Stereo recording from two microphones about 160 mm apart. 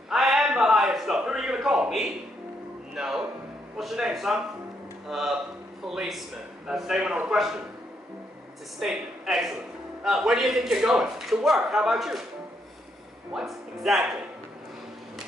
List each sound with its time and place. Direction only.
0.1 s a sound: centre (ahead or behind)
2.9 s music: 5° right (ahead or behind)
3.7 s a man's voice: 5° right (ahead or behind)
8.7 s a man's voice: centre (ahead or behind)
13.3 s a man's voice: 5° right (ahead or behind)